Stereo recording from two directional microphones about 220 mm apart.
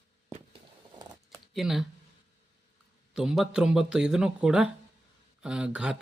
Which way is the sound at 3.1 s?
Centre (ahead or behind).